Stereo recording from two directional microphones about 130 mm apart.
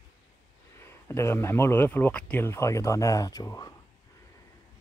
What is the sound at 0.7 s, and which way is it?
Speech, 20° left (ahead or behind).